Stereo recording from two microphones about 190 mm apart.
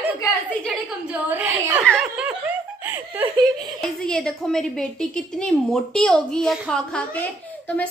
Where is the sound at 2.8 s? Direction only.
10° right (ahead or behind).